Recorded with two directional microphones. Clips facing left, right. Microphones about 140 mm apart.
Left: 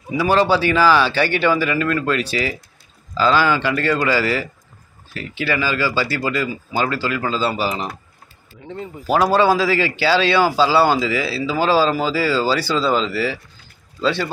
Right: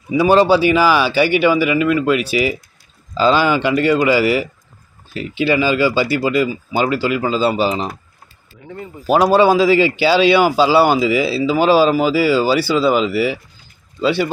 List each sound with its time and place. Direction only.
0.2 s speech: 20° right (ahead or behind)
8.6 s speech: 20° left (ahead or behind)
9.0 s speech: 20° right (ahead or behind)